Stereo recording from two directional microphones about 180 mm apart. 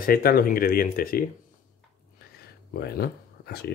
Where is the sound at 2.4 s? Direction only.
60° left (ahead or behind).